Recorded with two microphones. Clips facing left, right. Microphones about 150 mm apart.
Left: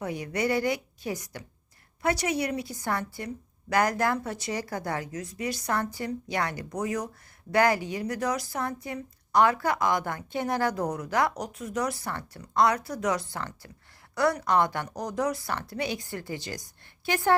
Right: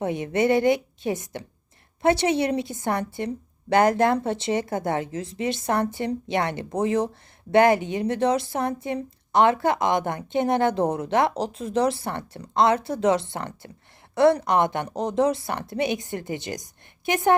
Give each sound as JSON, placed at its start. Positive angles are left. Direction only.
{"t": 0.0, "sound": "speech", "side_deg": -25}